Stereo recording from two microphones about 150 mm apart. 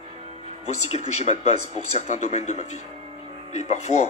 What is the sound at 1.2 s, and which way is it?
Speech, 45° left (ahead or behind).